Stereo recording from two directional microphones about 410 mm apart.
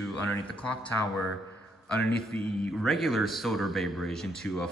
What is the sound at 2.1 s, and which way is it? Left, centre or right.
A man's voice, centre.